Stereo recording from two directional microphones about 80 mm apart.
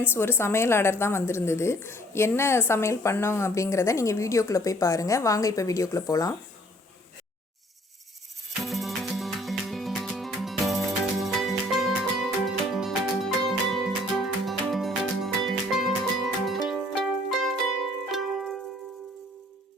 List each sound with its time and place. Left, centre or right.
0.1 s speech: left
8.6 s music: centre